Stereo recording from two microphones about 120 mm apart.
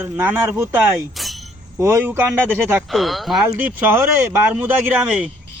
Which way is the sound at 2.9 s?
Centre (ahead or behind).